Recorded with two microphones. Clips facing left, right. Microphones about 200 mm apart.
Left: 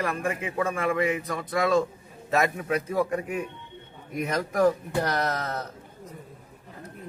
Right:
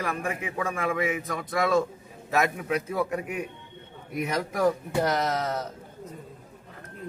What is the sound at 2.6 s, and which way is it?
Speech, 50° left (ahead or behind).